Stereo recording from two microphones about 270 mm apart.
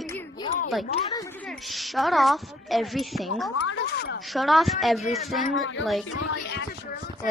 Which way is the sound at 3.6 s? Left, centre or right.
Left.